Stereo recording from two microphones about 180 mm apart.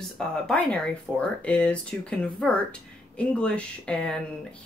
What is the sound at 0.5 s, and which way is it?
Speech, 5° left (ahead or behind).